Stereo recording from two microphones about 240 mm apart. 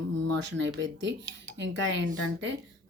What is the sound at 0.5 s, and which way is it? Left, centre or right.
Speech, right.